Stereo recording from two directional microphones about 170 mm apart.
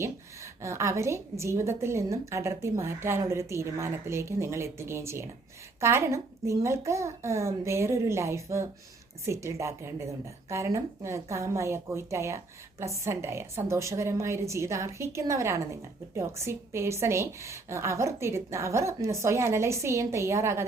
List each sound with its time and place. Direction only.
0.0 s a woman's voice: 15° right (ahead or behind)